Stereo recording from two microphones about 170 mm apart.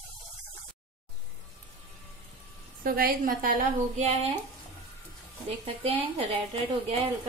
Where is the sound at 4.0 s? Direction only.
35° right (ahead or behind).